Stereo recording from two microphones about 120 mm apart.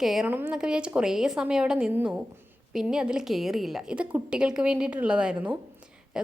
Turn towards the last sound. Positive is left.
turn(degrees=-10)  # may be behind; listen again after turning